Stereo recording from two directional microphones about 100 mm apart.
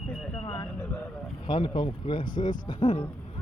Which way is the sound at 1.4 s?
50° left (ahead or behind).